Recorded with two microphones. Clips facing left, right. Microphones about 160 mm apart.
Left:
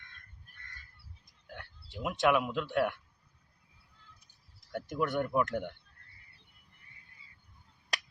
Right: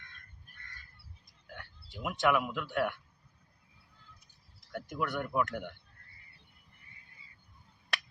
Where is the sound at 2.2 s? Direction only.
20° left (ahead or behind).